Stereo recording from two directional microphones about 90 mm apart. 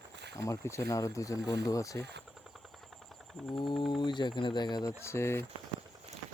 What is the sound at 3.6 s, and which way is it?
Speech, 60° left (ahead or behind).